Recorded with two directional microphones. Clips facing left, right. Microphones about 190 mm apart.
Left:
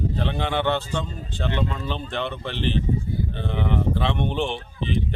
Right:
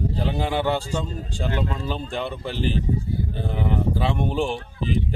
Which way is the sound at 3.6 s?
5° right (ahead or behind).